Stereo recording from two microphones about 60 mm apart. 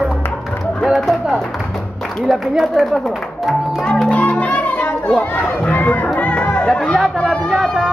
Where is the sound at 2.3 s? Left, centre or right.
Centre.